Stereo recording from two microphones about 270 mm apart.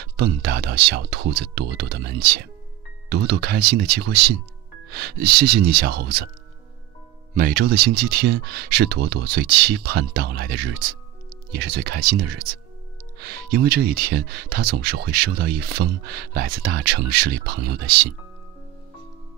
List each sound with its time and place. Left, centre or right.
0.0 s speech: right
7.3 s speech: right